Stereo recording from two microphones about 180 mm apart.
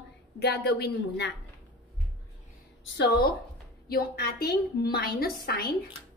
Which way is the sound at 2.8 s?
75° left (ahead or behind).